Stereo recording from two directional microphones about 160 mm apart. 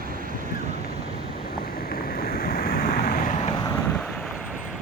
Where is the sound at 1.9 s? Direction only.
65° left (ahead or behind).